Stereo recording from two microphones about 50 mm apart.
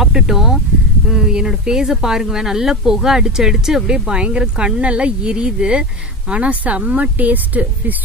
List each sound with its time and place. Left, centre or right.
0.0 s speech: centre; by 7.9 s right